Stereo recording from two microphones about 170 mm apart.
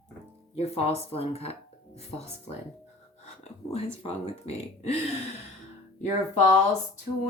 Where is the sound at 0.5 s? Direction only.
35° left (ahead or behind).